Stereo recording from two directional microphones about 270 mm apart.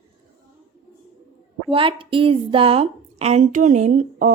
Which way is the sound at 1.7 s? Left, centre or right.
Centre.